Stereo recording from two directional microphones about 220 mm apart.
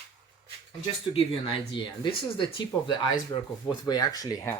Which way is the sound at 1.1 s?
25° left (ahead or behind).